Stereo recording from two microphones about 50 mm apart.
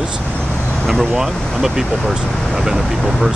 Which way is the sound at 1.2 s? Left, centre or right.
Centre.